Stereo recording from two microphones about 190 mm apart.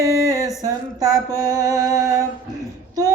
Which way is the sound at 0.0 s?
15° right (ahead or behind).